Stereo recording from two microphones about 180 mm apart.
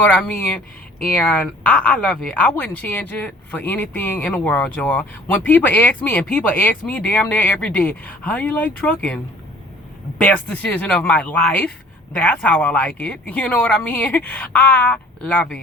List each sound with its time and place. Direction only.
0.0 s speech: 10° left (ahead or behind)